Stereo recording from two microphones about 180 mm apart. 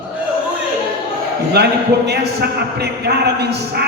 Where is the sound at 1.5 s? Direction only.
65° right (ahead or behind).